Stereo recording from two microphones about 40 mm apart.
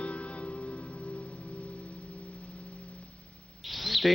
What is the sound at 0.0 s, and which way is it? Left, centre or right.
Music, left.